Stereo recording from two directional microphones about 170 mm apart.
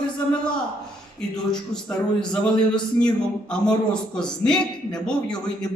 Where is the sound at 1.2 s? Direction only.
5° left (ahead or behind).